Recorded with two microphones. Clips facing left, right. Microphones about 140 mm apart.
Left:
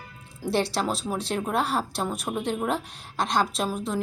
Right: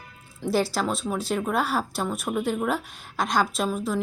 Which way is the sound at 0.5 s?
Centre (ahead or behind).